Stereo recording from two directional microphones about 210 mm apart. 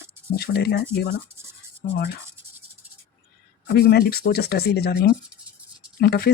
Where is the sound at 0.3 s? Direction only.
50° left (ahead or behind).